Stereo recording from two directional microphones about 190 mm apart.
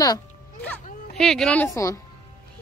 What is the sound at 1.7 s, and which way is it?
Speech, 15° left (ahead or behind).